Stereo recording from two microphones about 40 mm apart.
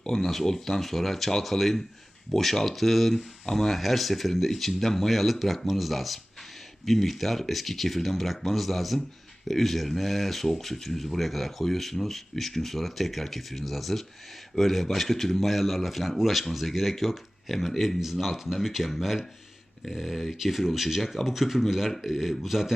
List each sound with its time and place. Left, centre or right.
0.0 s speech: centre